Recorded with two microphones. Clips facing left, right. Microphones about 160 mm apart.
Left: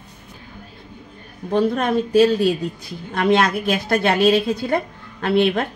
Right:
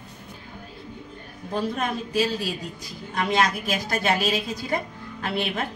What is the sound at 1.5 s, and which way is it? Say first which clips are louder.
A woman's voice: left 9 dB; 60° left (ahead or behind).